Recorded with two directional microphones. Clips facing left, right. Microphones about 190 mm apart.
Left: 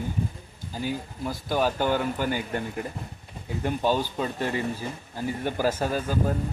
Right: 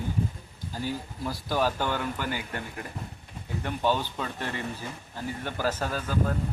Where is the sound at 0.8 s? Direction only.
20° left (ahead or behind).